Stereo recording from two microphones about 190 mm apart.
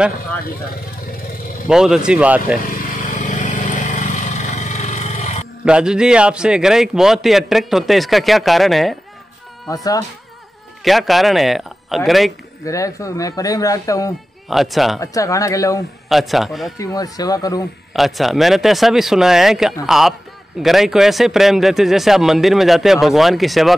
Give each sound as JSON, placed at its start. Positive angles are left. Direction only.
{"t": 1.7, "sound": "a man's voice", "side_deg": -5}
{"t": 2.7, "sound": "vehicle", "side_deg": 45}
{"t": 5.7, "sound": "a man's voice", "side_deg": -5}
{"t": 10.8, "sound": "a man's voice", "side_deg": 0}
{"t": 12.6, "sound": "speech", "side_deg": 15}
{"t": 14.5, "sound": "a man's voice", "side_deg": 0}
{"t": 15.0, "sound": "speech", "side_deg": 15}
{"t": 16.1, "sound": "a man's voice", "side_deg": 0}
{"t": 16.7, "sound": "speech", "side_deg": 20}
{"t": 17.9, "sound": "a man's voice", "side_deg": 0}